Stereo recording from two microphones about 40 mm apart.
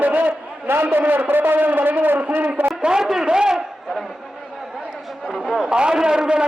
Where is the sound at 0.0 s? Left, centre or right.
Right.